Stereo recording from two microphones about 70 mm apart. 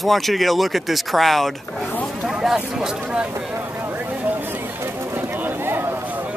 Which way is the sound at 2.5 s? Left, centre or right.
Centre.